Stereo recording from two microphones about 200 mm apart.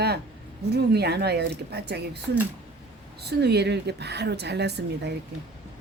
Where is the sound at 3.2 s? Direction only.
55° right (ahead or behind).